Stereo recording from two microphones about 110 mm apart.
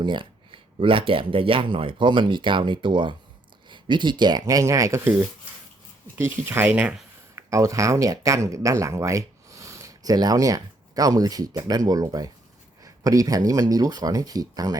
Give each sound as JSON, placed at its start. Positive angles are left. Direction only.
{"t": 0.0, "sound": "speech", "side_deg": -50}
{"t": 7.3, "sound": "speech", "side_deg": -30}